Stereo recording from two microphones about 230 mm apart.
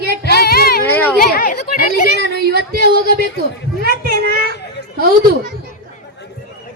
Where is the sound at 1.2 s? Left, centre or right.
Left.